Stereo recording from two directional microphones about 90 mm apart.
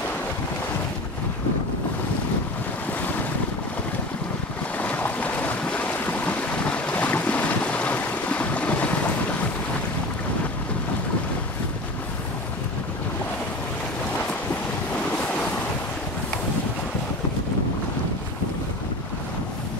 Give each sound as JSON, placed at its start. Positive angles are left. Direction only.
{"t": 4.7, "sound": "boat", "side_deg": 15}